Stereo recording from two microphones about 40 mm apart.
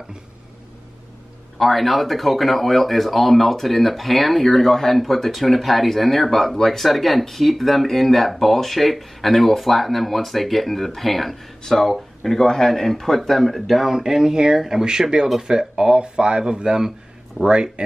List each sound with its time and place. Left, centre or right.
1.6 s speech: centre
13.9 s speech: centre